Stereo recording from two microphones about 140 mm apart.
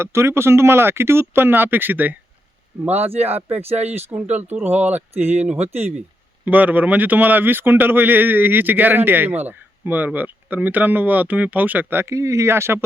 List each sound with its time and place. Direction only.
0.0 s a man's voice: 20° right (ahead or behind)
3.8 s speech: 50° right (ahead or behind)
4.1 s a man's voice: 10° right (ahead or behind)
5.5 s speech: 50° right (ahead or behind)
6.4 s a man's voice: 10° right (ahead or behind)